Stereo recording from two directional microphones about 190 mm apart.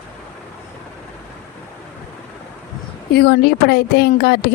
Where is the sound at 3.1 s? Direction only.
60° left (ahead or behind).